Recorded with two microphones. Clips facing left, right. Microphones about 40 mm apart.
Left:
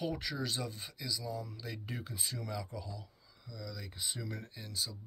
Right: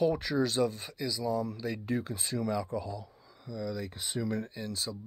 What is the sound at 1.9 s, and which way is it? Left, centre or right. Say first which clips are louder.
Speech: right 11 dB; right.